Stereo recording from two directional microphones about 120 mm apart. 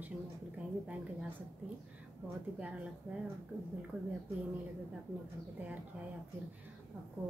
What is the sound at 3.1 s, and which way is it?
Speech, 15° right (ahead or behind).